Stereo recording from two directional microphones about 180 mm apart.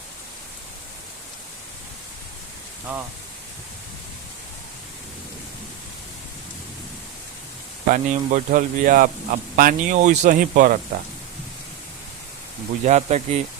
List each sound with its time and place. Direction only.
7.9 s a man's voice: 45° right (ahead or behind)
12.8 s speech: 35° right (ahead or behind)